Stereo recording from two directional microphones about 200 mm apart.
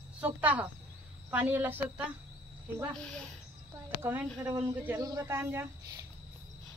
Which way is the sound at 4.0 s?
10° right (ahead or behind).